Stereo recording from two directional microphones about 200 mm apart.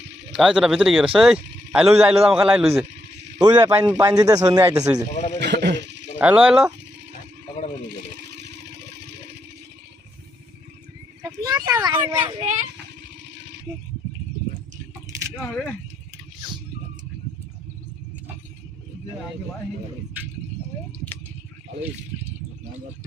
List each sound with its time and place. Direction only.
0.3 s speech: 5° right (ahead or behind)
3.4 s speech: 20° right (ahead or behind)
5.1 s a man's voice: 35° left (ahead or behind)
5.4 s a sound: 60° right (ahead or behind)
6.1 s speech: 5° right (ahead or behind)
8.4 s vehicle: 60° right (ahead or behind)
11.4 s speech: 15° right (ahead or behind)
13.2 s a sound: 60° right (ahead or behind)